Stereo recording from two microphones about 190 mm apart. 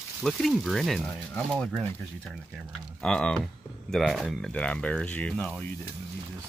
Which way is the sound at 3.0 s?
5° left (ahead or behind).